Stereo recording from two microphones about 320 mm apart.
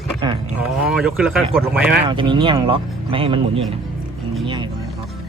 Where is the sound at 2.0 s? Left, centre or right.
Centre.